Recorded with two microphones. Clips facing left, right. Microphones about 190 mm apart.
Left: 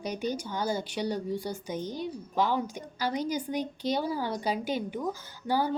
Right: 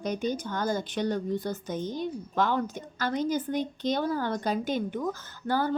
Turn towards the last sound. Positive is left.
turn(degrees=10)  # may be behind; listen again after turning